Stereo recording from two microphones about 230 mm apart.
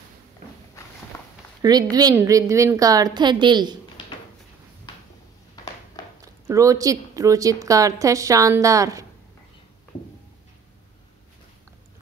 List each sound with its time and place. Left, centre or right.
1.1 s a sound: centre
1.6 s a woman's voice: centre
6.2 s a woman's voice: centre